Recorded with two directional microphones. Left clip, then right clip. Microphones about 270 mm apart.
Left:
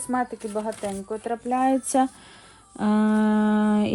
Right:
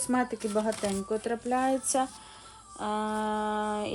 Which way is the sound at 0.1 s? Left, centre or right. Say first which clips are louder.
Left 2 dB; centre.